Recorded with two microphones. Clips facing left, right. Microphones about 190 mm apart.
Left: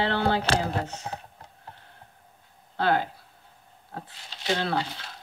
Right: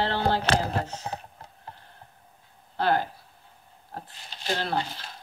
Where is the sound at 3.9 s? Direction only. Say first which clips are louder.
Even; 70° left (ahead or behind).